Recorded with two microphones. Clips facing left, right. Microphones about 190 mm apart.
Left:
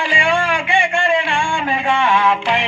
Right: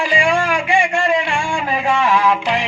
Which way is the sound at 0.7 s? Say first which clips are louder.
Right 1 dB; 30° left (ahead or behind).